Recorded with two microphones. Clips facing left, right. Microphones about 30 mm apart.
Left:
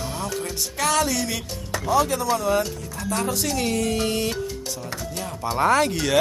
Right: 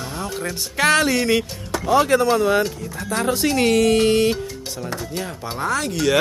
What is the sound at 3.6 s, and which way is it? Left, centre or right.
Music, right.